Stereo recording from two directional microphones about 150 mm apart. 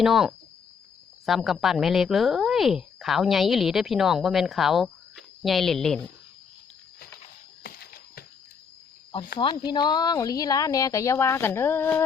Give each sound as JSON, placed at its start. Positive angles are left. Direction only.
{"t": 0.0, "sound": "speech", "side_deg": -5}
{"t": 7.6, "sound": "a sound", "side_deg": 85}
{"t": 9.4, "sound": "speech", "side_deg": 30}